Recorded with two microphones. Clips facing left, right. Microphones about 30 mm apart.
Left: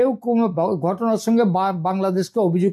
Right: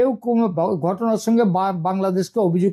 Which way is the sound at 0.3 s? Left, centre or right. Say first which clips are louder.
Even; left.